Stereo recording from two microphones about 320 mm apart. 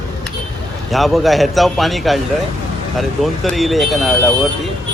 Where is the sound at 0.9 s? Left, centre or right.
Centre.